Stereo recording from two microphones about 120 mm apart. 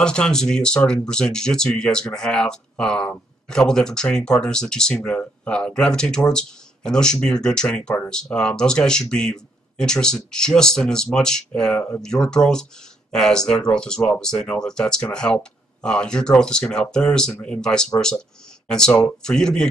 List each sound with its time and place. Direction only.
0.0 s speech: 5° left (ahead or behind)